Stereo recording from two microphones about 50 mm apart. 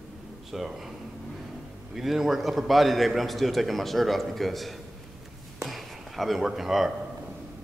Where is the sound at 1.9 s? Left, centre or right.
Centre.